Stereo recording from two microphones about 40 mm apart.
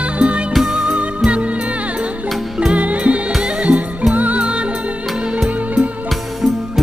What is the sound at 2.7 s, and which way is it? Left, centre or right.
Music, right.